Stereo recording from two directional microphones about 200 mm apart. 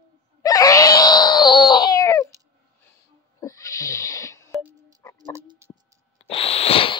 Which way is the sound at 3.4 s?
15° left (ahead or behind).